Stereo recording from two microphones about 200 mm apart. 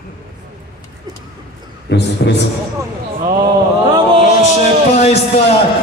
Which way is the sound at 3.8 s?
25° right (ahead or behind).